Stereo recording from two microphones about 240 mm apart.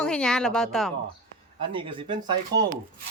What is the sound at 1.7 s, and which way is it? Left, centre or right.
Speech, right.